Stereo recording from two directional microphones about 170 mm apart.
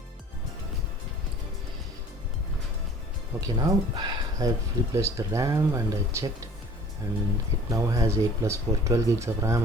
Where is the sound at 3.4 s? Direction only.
25° right (ahead or behind).